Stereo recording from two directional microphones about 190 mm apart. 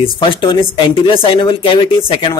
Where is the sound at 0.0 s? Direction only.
25° left (ahead or behind).